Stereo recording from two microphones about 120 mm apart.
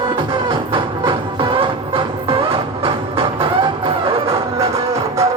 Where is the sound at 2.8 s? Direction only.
45° right (ahead or behind).